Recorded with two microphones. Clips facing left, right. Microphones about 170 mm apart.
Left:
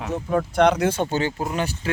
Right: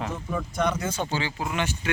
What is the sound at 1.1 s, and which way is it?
Speech, 40° left (ahead or behind).